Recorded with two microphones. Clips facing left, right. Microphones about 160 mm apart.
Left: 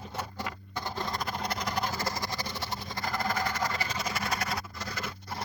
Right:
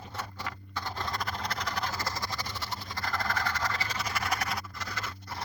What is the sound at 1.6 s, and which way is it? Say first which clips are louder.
Vehicle: left 2 dB; 15° left (ahead or behind).